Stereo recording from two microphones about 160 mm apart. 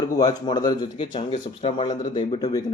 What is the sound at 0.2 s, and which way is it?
Speech, 25° left (ahead or behind).